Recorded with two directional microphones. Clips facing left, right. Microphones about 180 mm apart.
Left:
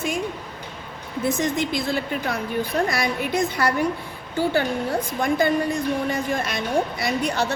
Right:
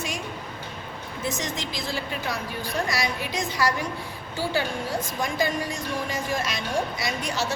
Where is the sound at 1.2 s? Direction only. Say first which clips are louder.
Left 8 dB; 55° left (ahead or behind).